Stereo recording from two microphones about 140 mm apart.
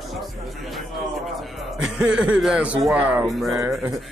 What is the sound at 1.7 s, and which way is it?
A man's voice, 5° right (ahead or behind).